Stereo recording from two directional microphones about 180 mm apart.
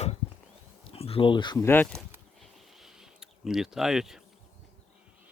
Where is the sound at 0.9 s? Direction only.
30° left (ahead or behind).